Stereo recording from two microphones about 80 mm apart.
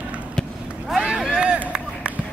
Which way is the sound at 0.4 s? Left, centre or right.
Centre.